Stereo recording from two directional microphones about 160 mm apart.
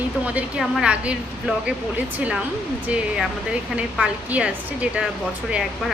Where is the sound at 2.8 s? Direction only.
5° right (ahead or behind).